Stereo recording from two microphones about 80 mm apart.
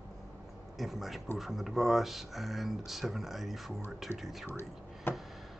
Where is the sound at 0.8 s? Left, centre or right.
Centre.